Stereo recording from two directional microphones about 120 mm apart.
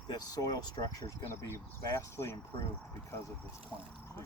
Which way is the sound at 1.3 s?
20° left (ahead or behind).